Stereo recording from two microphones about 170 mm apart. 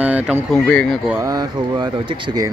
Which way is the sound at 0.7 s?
5° left (ahead or behind).